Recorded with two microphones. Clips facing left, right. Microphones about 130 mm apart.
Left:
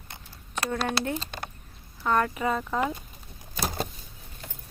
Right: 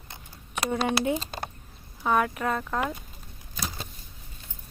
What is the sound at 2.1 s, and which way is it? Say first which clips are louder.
Speech: even; 5° right (ahead or behind).